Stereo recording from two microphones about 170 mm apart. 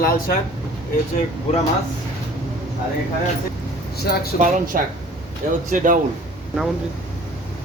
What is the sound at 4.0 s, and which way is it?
Speech, 65° left (ahead or behind).